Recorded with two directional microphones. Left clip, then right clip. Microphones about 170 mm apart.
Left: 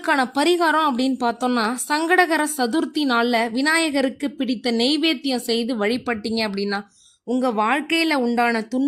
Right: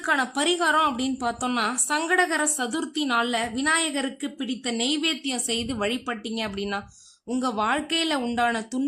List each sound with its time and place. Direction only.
0.0 s a woman's voice: 30° left (ahead or behind)
7.3 s a woman's voice: 15° left (ahead or behind)